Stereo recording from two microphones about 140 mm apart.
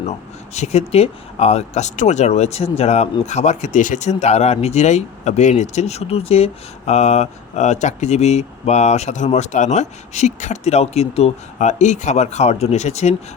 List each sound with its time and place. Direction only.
0.5 s speech: 50° left (ahead or behind)